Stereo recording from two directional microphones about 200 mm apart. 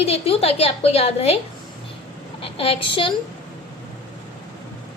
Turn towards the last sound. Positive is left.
turn(degrees=25)  # may be behind; listen again after turning